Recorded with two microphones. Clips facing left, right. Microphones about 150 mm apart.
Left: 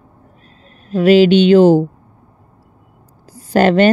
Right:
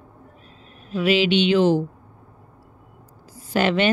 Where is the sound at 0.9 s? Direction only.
40° left (ahead or behind).